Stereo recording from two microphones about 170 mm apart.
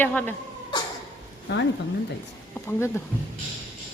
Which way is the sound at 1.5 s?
85° left.